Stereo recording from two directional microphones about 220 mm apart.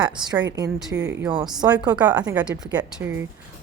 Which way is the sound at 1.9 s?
20° right (ahead or behind).